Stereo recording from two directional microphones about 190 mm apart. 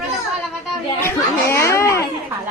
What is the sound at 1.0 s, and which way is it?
Speech, 15° left (ahead or behind).